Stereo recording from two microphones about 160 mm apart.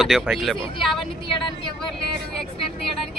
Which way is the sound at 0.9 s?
30° left (ahead or behind).